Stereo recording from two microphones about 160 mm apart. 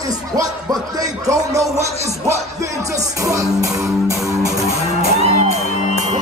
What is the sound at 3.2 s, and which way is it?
Music, 20° right (ahead or behind).